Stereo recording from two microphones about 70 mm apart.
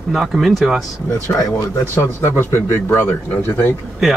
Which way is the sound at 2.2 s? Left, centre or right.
Left.